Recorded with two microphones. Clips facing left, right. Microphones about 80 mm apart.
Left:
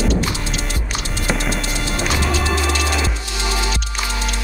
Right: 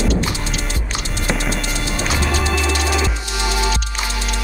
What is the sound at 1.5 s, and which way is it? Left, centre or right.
Music, left.